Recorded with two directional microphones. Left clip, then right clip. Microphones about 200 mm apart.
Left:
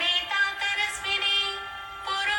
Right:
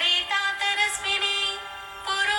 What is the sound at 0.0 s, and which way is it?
Music, 35° right (ahead or behind).